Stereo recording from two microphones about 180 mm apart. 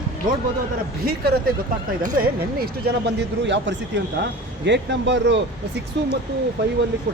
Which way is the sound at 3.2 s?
80° right.